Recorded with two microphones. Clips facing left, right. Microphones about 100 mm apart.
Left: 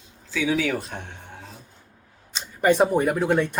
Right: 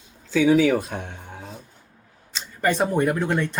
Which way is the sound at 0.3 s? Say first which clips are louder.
Right 7 dB; 50° right (ahead or behind).